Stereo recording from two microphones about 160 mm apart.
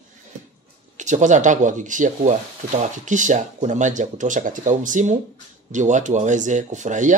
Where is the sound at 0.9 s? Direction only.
50° right (ahead or behind).